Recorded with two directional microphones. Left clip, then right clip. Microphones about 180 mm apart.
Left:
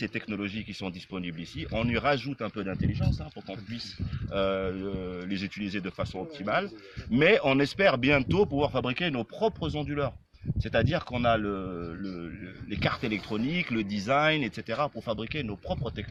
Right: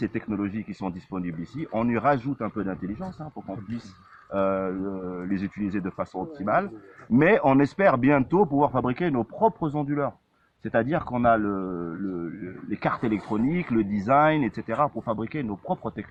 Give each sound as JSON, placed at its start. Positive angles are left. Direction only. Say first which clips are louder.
{"t": 0.0, "sound": "speech", "louder": "right 4 dB", "side_deg": 35}
{"t": 4.3, "sound": "speech", "louder": "right 3 dB", "side_deg": 35}
{"t": 15.0, "sound": "speech", "louder": "right 3 dB", "side_deg": 30}